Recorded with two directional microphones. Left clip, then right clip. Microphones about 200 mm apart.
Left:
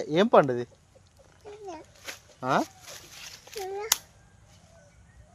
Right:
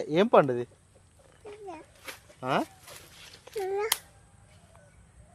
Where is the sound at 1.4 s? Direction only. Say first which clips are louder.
Even; 55° right (ahead or behind).